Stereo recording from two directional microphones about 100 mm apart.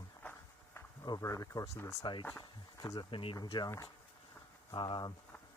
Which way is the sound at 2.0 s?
50° left (ahead or behind).